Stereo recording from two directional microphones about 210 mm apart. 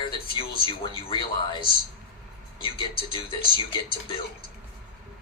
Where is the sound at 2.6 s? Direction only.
25° left (ahead or behind).